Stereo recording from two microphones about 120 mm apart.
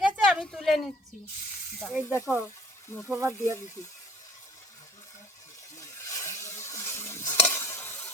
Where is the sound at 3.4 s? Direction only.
25° left (ahead or behind).